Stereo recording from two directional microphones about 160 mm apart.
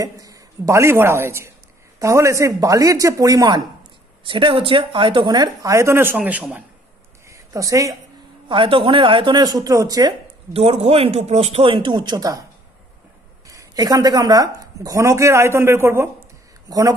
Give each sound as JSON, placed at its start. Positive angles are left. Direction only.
{"t": 0.0, "sound": "a woman's voice", "side_deg": -20}
{"t": 8.5, "sound": "a woman's voice", "side_deg": -35}
{"t": 10.5, "sound": "speech", "side_deg": -40}
{"t": 13.5, "sound": "a woman's voice", "side_deg": -20}